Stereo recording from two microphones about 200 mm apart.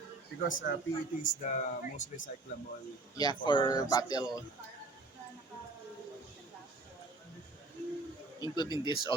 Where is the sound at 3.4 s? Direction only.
25° left (ahead or behind).